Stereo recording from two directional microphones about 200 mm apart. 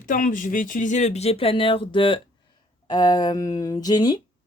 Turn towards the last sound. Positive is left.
turn(degrees=20)  # may be behind; listen again after turning